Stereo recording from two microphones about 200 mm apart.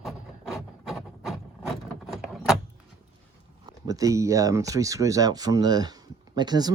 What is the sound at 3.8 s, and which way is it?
Speech, 15° right (ahead or behind).